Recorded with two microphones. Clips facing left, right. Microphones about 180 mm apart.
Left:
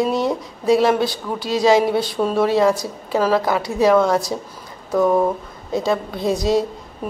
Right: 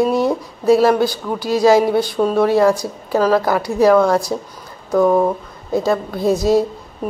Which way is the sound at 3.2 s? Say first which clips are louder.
Right 3 dB; 25° left (ahead or behind).